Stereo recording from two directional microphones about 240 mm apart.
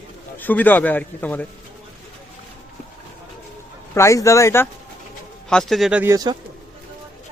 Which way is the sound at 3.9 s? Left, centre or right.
Centre.